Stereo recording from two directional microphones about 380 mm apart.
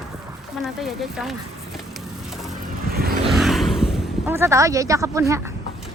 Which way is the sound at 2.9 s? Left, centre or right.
Right.